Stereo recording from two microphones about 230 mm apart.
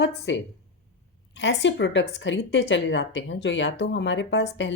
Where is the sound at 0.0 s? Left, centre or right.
Left.